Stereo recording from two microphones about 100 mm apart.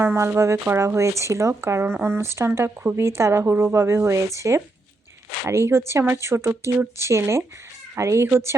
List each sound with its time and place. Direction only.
0.0 s speech: 25° right (ahead or behind)